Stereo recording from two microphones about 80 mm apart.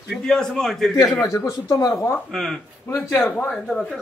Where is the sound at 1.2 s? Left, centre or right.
Left.